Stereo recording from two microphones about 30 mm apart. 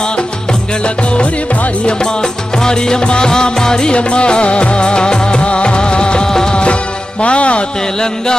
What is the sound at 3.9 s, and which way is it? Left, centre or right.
Music of bollywood, left.